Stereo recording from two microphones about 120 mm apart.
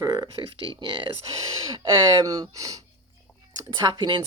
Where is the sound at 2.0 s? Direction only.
30° right (ahead or behind).